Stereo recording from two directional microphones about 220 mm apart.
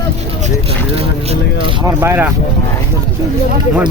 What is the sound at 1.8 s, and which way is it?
Speech, 10° right (ahead or behind).